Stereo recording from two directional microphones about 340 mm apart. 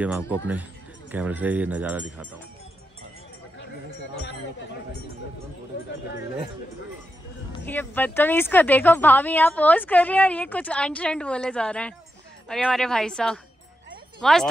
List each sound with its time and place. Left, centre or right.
0.0 s a woman's voice: centre
7.6 s a woman's voice: centre